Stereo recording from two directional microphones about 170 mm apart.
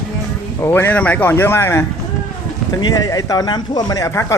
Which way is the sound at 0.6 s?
10° left (ahead or behind).